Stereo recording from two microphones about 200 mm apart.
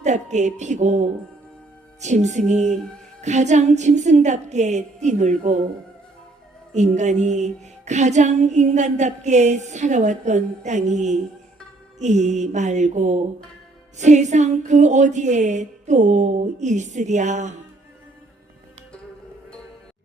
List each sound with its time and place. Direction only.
0.0 s music: 35° right (ahead or behind)
6.7 s music: 35° right (ahead or behind)